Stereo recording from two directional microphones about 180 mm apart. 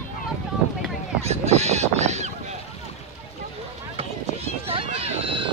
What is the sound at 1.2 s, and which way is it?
Speech, 35° right (ahead or behind).